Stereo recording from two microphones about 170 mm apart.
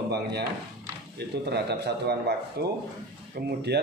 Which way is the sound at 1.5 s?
75° right (ahead or behind).